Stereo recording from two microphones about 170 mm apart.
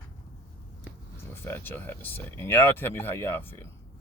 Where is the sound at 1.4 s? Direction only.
10° left (ahead or behind).